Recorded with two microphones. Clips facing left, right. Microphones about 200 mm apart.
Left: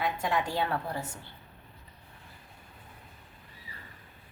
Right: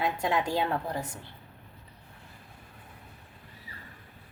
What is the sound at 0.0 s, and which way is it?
A woman's voice, 25° right (ahead or behind).